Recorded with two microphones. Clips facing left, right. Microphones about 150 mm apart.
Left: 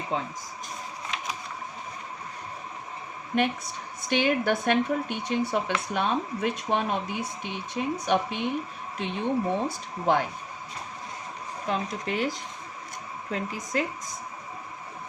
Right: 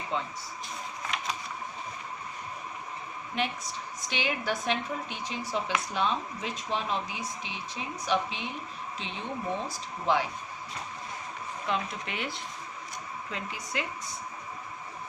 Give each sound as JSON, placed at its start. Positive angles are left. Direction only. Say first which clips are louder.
{"t": 0.1, "sound": "speech", "louder": "left 2 dB", "side_deg": 40}
{"t": 4.1, "sound": "speech", "louder": "left 8 dB", "side_deg": 55}
{"t": 11.6, "sound": "speech", "louder": "left 3 dB", "side_deg": 40}